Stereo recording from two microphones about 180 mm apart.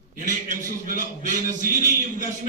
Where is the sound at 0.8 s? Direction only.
50° right (ahead or behind).